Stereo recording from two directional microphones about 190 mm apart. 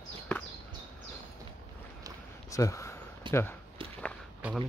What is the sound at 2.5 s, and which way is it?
Speech, 15° left (ahead or behind).